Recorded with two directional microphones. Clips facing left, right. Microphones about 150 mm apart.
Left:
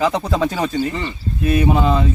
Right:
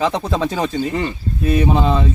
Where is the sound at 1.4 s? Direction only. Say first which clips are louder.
Even; 30° right (ahead or behind).